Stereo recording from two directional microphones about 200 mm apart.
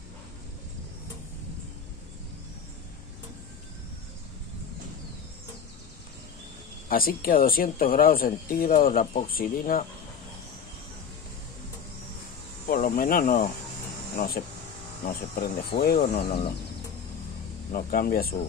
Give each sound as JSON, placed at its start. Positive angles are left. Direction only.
{"t": 6.9, "sound": "speech", "side_deg": 45}
{"t": 12.6, "sound": "speech", "side_deg": 45}
{"t": 17.7, "sound": "speech", "side_deg": 45}